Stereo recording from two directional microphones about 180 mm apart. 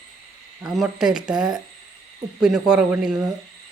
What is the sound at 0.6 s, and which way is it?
Speech, centre (ahead or behind).